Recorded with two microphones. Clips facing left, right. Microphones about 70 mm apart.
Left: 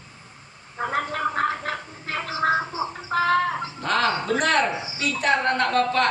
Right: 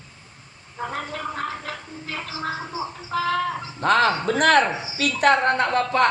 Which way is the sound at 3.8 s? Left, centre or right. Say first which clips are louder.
Right 5 dB; right.